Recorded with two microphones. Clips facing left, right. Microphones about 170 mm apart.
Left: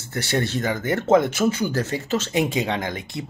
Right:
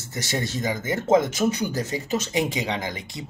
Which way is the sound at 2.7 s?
55° left (ahead or behind).